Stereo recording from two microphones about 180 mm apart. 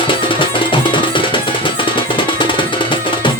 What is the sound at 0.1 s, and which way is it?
Music, 30° left (ahead or behind).